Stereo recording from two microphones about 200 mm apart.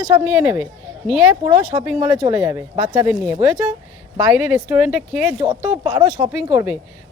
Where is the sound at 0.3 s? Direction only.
5° right (ahead or behind).